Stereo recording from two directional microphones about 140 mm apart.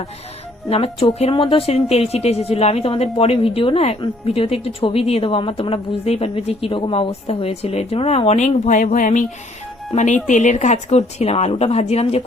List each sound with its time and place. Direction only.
0.7 s a woman's voice: 45° left (ahead or behind)